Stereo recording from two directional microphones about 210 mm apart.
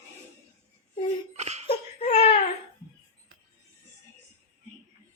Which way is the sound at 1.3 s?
30° right (ahead or behind).